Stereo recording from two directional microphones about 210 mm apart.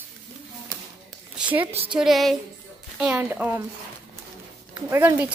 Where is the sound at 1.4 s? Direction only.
10° right (ahead or behind).